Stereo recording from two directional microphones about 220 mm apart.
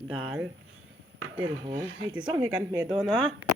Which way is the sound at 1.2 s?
65° right (ahead or behind).